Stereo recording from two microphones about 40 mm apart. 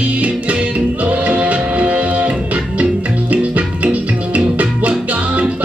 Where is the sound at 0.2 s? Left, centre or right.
Right.